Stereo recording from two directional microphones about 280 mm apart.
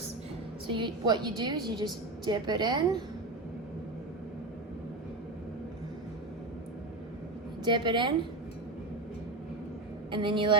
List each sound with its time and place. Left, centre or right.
0.7 s a woman's voice: centre
7.6 s a woman's voice: centre
10.1 s a woman's voice: centre